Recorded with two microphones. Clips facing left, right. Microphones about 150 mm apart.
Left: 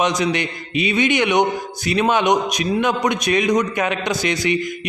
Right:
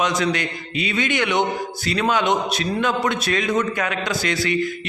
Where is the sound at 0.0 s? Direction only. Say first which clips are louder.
Left 2 dB; 20° left (ahead or behind).